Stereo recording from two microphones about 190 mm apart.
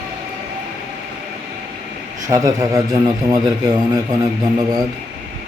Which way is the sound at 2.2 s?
20° right (ahead or behind).